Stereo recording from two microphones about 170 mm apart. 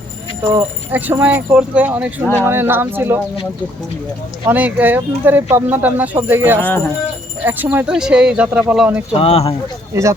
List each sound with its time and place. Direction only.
0.5 s speech: 15° right (ahead or behind)
4.4 s speech: 10° right (ahead or behind)
6.6 s speech: 10° left (ahead or behind)
7.4 s speech: 10° right (ahead or behind)
9.1 s speech: 35° left (ahead or behind)
9.9 s speech: 15° right (ahead or behind)